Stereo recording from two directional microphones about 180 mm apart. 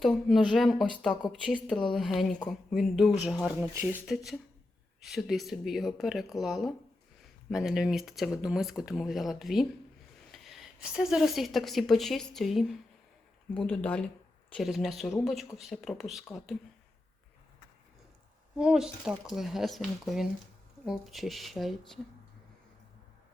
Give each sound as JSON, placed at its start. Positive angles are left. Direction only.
{"t": 0.0, "sound": "speech", "side_deg": 0}
{"t": 18.5, "sound": "speech", "side_deg": -5}